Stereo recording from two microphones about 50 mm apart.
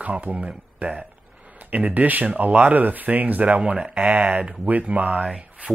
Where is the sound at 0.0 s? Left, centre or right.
Right.